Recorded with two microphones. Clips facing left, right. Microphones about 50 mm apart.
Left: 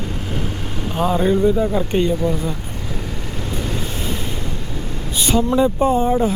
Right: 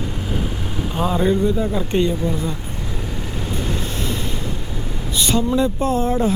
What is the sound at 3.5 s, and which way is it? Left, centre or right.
Vehicle, centre.